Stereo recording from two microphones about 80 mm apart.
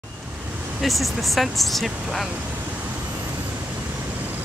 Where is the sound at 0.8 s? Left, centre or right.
Centre.